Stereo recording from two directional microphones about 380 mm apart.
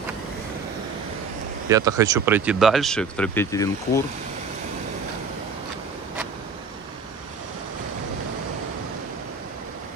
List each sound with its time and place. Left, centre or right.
1.7 s speech: centre